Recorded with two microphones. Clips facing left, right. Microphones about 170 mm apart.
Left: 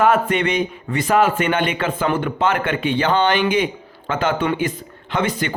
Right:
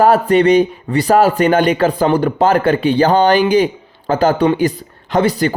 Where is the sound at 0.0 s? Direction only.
35° right (ahead or behind).